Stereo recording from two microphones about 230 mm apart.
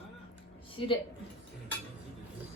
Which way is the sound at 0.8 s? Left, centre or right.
Left.